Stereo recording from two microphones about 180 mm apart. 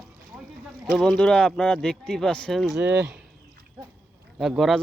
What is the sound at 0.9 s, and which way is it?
Speech, centre (ahead or behind).